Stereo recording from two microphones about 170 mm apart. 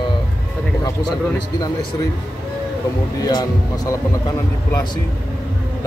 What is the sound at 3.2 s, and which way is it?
Speech, 25° left (ahead or behind).